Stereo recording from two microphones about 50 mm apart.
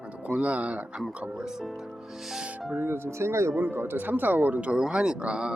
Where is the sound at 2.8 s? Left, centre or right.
Right.